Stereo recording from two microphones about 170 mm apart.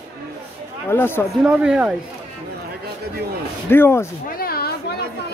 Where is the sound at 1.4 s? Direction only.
5° right (ahead or behind).